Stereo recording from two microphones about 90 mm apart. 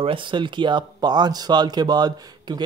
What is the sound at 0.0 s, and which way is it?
Speech, 65° right (ahead or behind).